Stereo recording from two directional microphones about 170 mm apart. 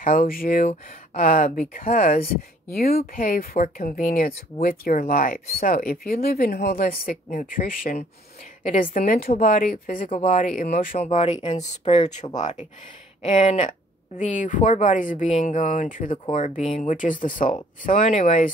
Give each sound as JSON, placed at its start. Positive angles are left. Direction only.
{"t": 0.0, "sound": "speech", "side_deg": 55}
{"t": 11.0, "sound": "speech", "side_deg": 40}